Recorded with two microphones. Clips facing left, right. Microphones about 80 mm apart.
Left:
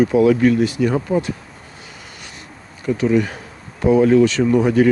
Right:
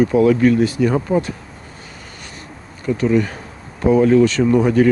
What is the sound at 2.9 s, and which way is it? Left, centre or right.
Speech, centre.